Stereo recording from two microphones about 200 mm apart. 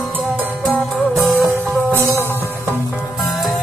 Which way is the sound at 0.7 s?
Centre (ahead or behind).